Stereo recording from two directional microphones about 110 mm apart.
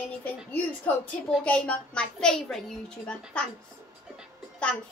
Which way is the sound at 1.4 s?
10° left (ahead or behind).